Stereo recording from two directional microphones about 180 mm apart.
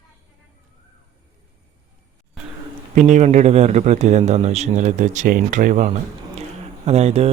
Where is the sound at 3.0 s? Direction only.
40° right (ahead or behind).